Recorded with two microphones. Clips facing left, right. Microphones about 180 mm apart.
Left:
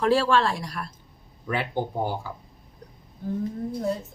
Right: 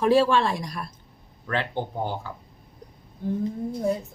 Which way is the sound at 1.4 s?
10° left (ahead or behind).